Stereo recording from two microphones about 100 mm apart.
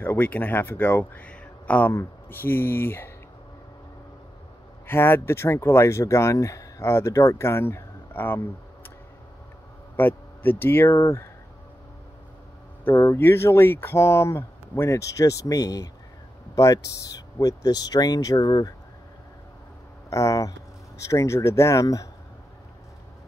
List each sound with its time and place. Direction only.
0.0 s speech: 20° left (ahead or behind)
4.8 s speech: 25° left (ahead or behind)
9.9 s speech: 20° left (ahead or behind)
12.8 s speech: 25° left (ahead or behind)
20.1 s speech: 30° left (ahead or behind)